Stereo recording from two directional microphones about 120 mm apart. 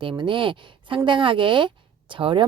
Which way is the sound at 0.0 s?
45° right (ahead or behind).